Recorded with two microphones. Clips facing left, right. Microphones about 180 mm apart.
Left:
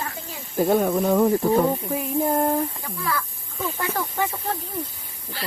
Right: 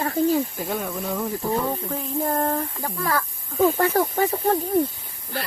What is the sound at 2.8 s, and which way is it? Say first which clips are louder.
Speech: right 3 dB; 45° right (ahead or behind).